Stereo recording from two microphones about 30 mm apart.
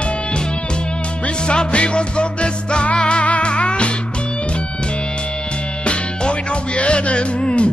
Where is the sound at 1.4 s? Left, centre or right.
Left.